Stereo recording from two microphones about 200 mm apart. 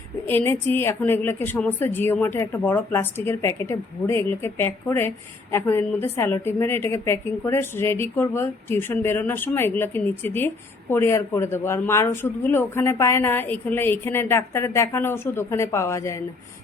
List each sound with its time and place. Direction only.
0.3 s a woman's voice: 10° left (ahead or behind)